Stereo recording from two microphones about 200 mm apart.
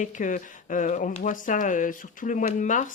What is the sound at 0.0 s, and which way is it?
Speech, 40° left (ahead or behind).